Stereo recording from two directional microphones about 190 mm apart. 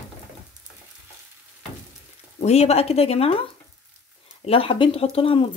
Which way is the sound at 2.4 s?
35° left (ahead or behind).